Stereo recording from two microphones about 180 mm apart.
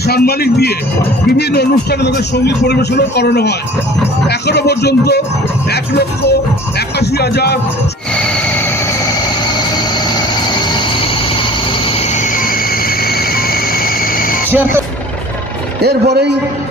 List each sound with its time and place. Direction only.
0.0 s a man's voice: 60° left (ahead or behind)
8.1 s music: 5° left (ahead or behind)
9.6 s music: 25° left (ahead or behind); by 14.4 s 50° left (ahead or behind)
15.8 s a man's voice: 65° right (ahead or behind)